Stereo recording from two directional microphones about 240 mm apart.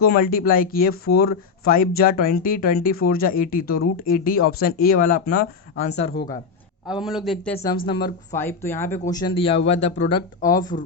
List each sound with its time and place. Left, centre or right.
0.0 s speech: left
6.8 s a man's voice: centre